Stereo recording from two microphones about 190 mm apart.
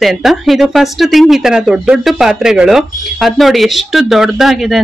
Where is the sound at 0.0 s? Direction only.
Centre (ahead or behind).